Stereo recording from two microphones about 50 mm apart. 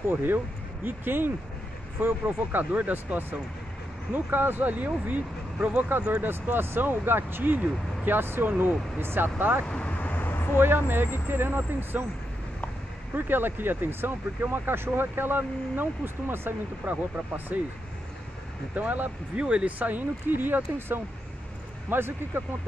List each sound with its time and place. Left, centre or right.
0.1 s speech: right
6.2 s speech: right
9.7 s vehicle: left
10.6 s speech: right
13.1 s speech: right
17.5 s speech: right
18.8 s speech: right
19.4 s speech: right
19.8 s speech: right